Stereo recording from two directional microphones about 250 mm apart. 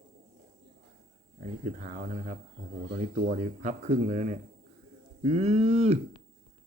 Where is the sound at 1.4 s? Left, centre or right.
Right.